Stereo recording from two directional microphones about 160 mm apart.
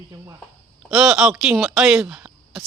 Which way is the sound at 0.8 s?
5° right (ahead or behind).